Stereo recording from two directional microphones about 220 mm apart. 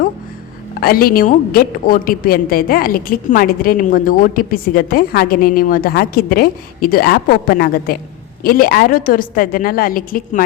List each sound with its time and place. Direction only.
0.8 s a woman's voice: 40° left (ahead or behind)